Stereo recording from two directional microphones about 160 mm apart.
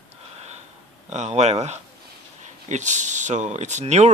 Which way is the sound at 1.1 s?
45° right (ahead or behind).